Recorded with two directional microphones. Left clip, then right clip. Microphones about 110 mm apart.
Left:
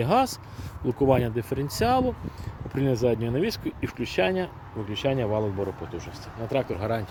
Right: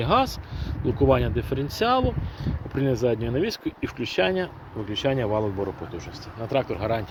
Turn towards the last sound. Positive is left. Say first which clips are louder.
# right 2 dB
turn(degrees=40)  # may be behind; listen again after turning